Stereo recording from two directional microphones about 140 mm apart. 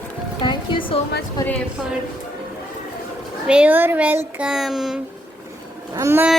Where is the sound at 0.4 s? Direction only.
35° left (ahead or behind).